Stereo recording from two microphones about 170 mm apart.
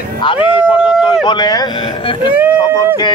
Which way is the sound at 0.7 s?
5° right (ahead or behind).